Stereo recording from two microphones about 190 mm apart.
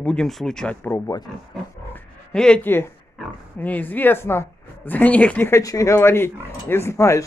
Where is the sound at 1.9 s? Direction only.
5° left (ahead or behind).